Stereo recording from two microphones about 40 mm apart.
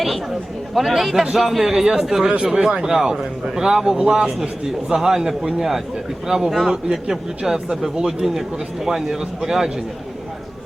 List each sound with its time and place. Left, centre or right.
0.7 s a man's voice: centre